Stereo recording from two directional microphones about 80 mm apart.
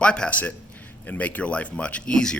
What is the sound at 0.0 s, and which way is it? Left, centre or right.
Speech, centre.